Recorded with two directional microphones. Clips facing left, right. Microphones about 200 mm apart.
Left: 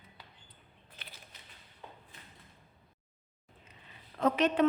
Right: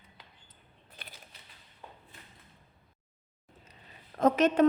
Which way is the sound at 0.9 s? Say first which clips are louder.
Right 2 dB; 35° right (ahead or behind).